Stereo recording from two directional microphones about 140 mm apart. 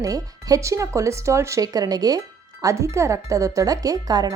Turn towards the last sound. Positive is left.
turn(degrees=-25)  # may be behind; listen again after turning